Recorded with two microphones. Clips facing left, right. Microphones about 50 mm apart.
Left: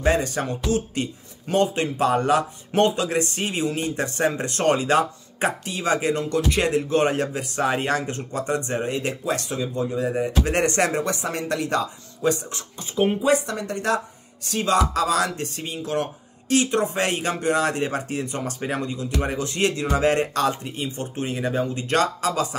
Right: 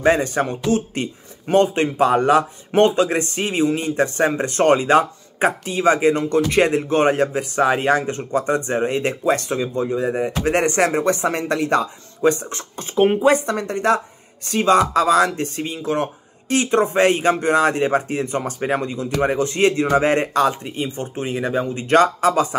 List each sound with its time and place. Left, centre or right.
0.0 s speech: right
11.1 s speech: right; by 21.8 s centre
21.8 s speech: right